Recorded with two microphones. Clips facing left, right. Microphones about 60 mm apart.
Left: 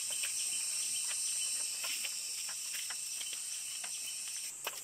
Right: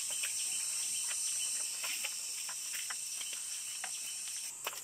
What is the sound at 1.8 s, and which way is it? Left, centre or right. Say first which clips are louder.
Chicken: right 1 dB; right.